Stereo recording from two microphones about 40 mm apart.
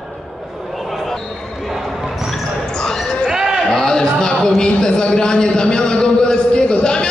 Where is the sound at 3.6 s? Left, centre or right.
Centre.